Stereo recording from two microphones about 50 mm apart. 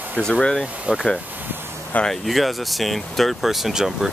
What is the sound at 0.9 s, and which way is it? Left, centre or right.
Speech, centre.